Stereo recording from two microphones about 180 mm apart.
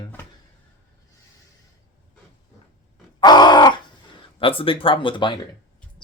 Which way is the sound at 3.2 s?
25° left (ahead or behind).